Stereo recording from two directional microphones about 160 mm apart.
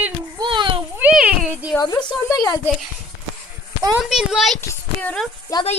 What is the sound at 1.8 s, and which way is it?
Speech, 25° left (ahead or behind).